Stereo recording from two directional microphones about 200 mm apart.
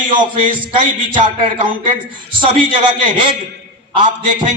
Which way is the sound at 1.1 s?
25° right (ahead or behind).